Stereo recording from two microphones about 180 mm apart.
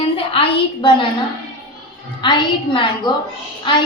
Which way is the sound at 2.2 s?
25° left (ahead or behind).